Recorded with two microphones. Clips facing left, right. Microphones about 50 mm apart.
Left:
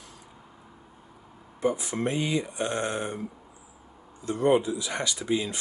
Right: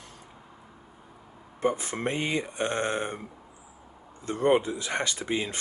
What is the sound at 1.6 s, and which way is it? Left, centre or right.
Speech, right.